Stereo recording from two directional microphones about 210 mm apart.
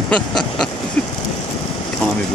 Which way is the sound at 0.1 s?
Centre (ahead or behind).